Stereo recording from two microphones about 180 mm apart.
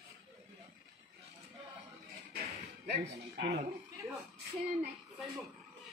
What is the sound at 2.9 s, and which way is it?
Speech, 65° right (ahead or behind).